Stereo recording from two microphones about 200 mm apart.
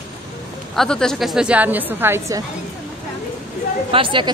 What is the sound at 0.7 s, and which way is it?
A woman's voice, 5° left (ahead or behind).